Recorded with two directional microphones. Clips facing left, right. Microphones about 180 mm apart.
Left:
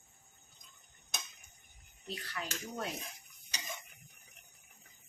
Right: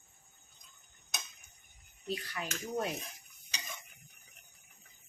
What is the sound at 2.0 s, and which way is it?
Speech, 15° right (ahead or behind).